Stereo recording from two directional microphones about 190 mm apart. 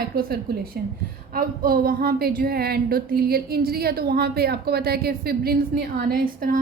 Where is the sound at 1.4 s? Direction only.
50° right (ahead or behind).